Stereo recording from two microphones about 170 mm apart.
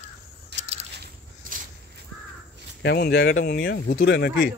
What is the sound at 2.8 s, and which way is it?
Speech, 70° left (ahead or behind).